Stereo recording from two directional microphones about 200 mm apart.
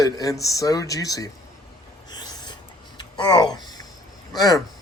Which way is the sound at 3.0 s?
20° left (ahead or behind).